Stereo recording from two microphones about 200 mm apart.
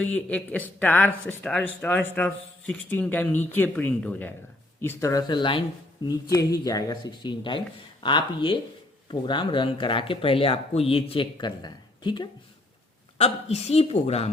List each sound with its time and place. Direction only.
0.0 s a woman's voice: 5° left (ahead or behind); by 14.3 s 30° left (ahead or behind)